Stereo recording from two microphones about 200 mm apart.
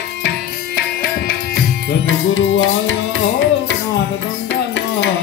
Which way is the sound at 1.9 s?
70° left (ahead or behind).